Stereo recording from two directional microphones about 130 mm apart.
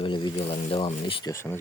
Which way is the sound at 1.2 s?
20° left (ahead or behind).